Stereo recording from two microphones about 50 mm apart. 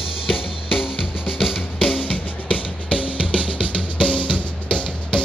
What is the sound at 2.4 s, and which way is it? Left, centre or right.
Music, left.